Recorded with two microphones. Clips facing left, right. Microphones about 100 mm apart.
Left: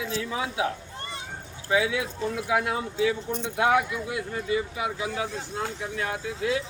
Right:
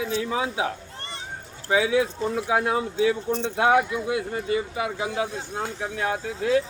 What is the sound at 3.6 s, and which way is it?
Speech, 35° right (ahead or behind).